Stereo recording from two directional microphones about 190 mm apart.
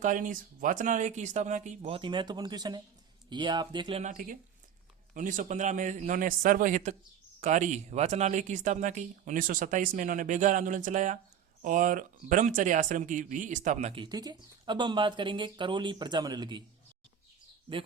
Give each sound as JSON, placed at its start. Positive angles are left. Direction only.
{"t": 0.0, "sound": "speech", "side_deg": -45}
{"t": 4.0, "sound": "speech", "side_deg": -45}